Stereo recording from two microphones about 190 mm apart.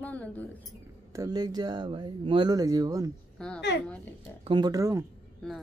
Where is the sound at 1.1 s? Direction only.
20° right (ahead or behind).